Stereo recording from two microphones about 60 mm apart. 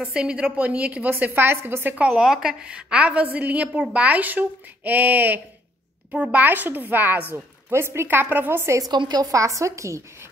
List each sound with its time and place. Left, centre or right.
0.0 s speech: centre
1.3 s a woman's voice: right
2.0 s a woman's voice: centre
2.6 s speech: centre
6.1 s speech: centre
6.4 s a woman's voice: right
7.7 s a woman's voice: right
8.7 s a woman's voice: right